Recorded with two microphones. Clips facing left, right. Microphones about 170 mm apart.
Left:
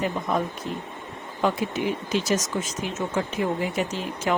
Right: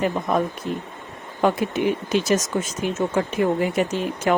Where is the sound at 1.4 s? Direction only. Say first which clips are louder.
Right 4 dB; 55° right (ahead or behind).